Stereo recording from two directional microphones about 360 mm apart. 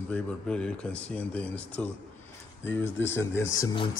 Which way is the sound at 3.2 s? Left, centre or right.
Centre.